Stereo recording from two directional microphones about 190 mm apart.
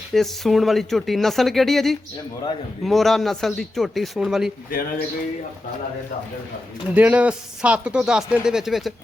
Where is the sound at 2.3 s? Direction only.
20° left (ahead or behind).